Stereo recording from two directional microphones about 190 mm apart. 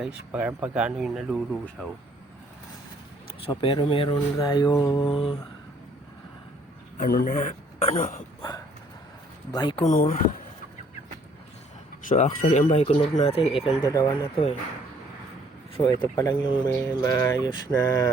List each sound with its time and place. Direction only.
0.0 s speech: 5° right (ahead or behind)
3.4 s speech: 25° left (ahead or behind)
5.0 s speech: 30° left (ahead or behind)
7.0 s a man's voice: 50° left (ahead or behind)
8.4 s a sound: 20° left (ahead or behind)
9.6 s speech: 25° left (ahead or behind)
9.8 s a man's voice: 45° left (ahead or behind)
12.0 s speech: 40° left (ahead or behind)
13.8 s speech: 20° left (ahead or behind)
15.8 s speech: 25° left (ahead or behind)
16.8 s mantra: 15° left (ahead or behind)